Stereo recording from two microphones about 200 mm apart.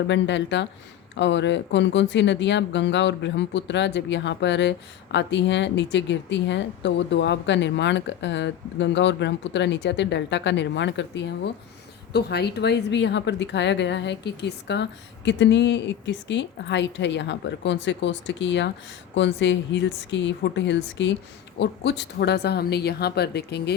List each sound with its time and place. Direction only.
0.1 s a woman's voice: 60° left (ahead or behind)